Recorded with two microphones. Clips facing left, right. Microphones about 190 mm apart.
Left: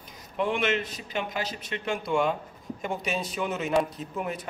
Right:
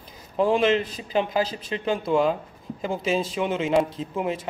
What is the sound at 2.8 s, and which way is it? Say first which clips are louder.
Speech: right 6 dB; 90° right.